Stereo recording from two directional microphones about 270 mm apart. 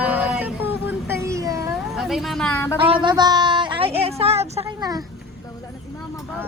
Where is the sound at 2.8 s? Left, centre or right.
Centre.